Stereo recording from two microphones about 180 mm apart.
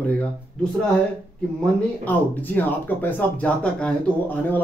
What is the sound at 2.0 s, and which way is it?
Speech, 10° left (ahead or behind).